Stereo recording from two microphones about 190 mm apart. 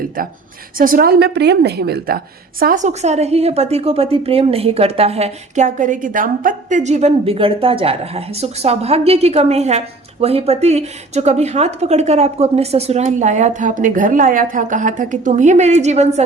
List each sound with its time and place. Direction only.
0.8 s a woman's voice: 50° right (ahead or behind)